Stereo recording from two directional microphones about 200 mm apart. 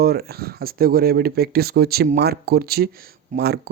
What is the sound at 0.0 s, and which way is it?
Speech, 50° right (ahead or behind).